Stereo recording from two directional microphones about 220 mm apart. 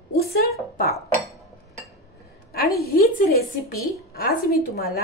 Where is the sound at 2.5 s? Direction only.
45° left (ahead or behind).